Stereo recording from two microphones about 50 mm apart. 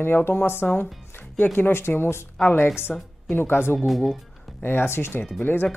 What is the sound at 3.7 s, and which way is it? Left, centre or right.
Speech, centre.